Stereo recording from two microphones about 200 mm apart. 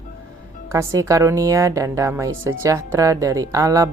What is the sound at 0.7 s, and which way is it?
A woman's voice, 15° right (ahead or behind).